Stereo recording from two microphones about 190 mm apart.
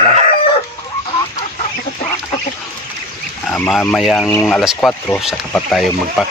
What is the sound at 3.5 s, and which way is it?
Speech, 5° left (ahead or behind).